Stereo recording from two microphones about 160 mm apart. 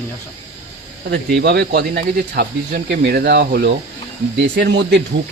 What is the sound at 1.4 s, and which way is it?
Speech, 90° right.